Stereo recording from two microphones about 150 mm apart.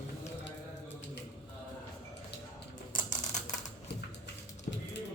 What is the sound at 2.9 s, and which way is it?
Typewriter, 55° left (ahead or behind).